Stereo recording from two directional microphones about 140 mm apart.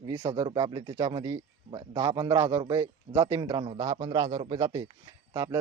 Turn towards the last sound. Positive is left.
turn(degrees=-25)  # may be behind; listen again after turning